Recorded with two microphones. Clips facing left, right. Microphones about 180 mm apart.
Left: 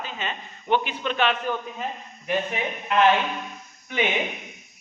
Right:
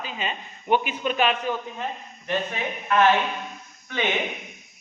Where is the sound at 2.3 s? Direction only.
20° left (ahead or behind).